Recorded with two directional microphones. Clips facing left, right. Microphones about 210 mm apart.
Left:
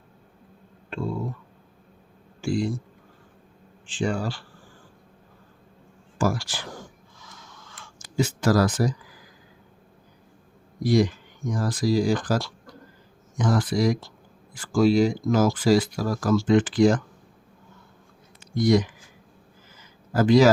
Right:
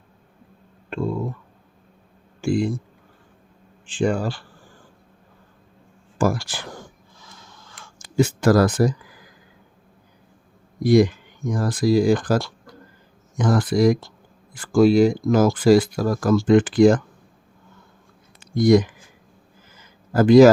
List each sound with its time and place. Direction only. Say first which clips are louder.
2.4 s speech: right 4 dB; 55° right (ahead or behind)
3.9 s speech: right 5 dB; 55° right (ahead or behind)
6.1 s speech: right 4 dB; 55° right (ahead or behind)
7.2 s a sound: right 1 dB; 30° right (ahead or behind)
8.1 s speech: right 5 dB; 55° right (ahead or behind)
10.8 s speech: right 5 dB; 55° right (ahead or behind)
18.5 s speech: right 5 dB; 50° right (ahead or behind)
20.1 s speech: right 6 dB; 50° right (ahead or behind)